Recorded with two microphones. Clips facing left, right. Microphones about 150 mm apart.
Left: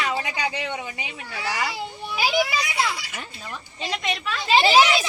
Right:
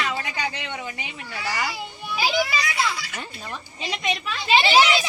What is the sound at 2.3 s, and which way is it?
Speech, 15° left (ahead or behind).